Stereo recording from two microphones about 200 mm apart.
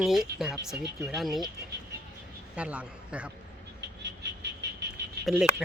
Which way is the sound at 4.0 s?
60° right (ahead or behind).